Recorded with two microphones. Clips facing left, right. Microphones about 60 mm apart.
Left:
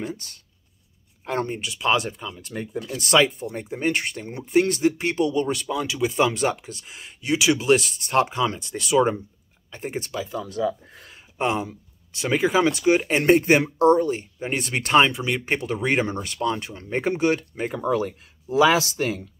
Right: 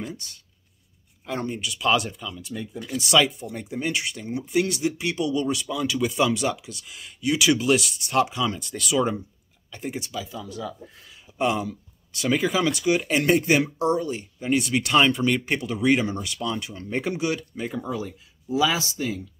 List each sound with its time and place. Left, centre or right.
0.0 s speech: left
1.5 s speech: left
2.4 s speech: left
5.9 s speech: left
6.1 s speech: left
11.3 s speech: left
15.0 s speech: centre
15.4 s speech: left